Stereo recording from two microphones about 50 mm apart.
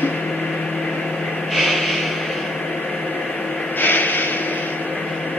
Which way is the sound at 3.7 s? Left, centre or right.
Left.